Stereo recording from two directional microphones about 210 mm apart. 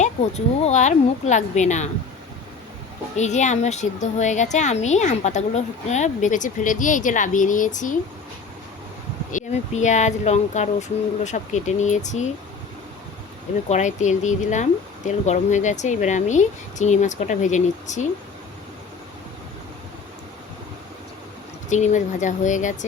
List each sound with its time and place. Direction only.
0.0 s a child's voice: 30° left (ahead or behind)
3.2 s a child's voice: 35° left (ahead or behind)
9.3 s a child's voice: 35° left (ahead or behind)
13.7 s a child's voice: 35° left (ahead or behind)
21.7 s a child's voice: 35° left (ahead or behind)